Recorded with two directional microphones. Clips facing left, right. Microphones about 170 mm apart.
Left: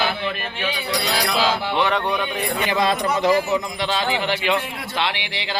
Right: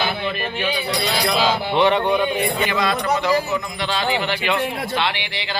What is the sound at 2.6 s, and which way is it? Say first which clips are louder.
Speech: even; 30° left (ahead or behind).